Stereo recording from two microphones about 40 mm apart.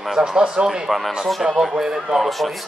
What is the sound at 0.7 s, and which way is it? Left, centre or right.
Speech, centre.